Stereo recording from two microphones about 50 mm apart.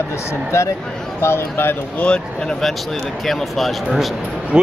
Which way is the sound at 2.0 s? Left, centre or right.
Left.